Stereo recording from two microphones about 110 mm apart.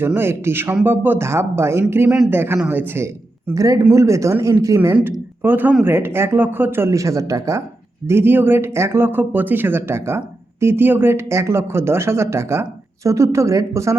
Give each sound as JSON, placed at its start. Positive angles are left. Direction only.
{"t": 0.0, "sound": "speech", "side_deg": -20}
{"t": 2.0, "sound": "a man's voice", "side_deg": -5}
{"t": 2.3, "sound": "speech", "side_deg": -20}
{"t": 3.5, "sound": "speech", "side_deg": -30}
{"t": 5.4, "sound": "speech", "side_deg": -15}